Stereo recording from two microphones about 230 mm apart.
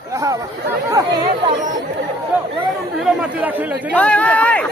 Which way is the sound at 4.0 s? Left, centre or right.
Centre.